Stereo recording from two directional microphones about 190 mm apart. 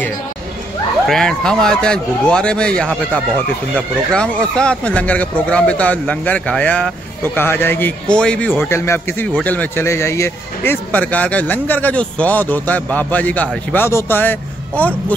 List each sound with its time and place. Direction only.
1.0 s a man's voice: centre (ahead or behind)